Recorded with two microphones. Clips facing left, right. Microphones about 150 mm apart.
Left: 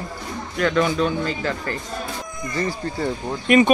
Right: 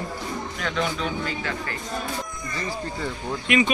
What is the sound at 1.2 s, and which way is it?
Speech, 40° left (ahead or behind).